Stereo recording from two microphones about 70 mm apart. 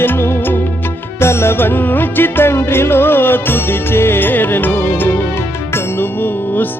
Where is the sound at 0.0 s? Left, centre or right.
Left.